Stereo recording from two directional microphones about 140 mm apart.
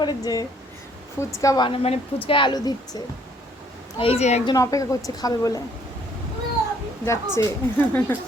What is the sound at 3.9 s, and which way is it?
Speech, 45° left (ahead or behind).